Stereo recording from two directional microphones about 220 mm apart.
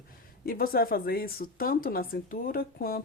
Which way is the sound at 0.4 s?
40° left (ahead or behind).